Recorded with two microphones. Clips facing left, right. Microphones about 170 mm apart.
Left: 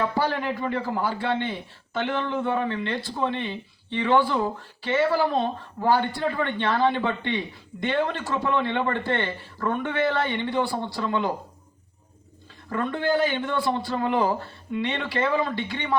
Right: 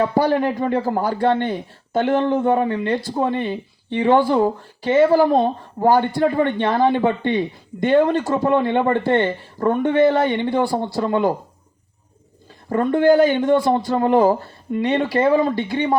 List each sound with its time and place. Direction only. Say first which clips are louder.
0.3 s speech: right 8 dB; 40° right (ahead or behind)
9.9 s speech: right 10 dB; 15° right (ahead or behind)
10.2 s a man's voice: right 6 dB; 40° right (ahead or behind)
12.6 s a man's voice: right 10 dB; 40° right (ahead or behind)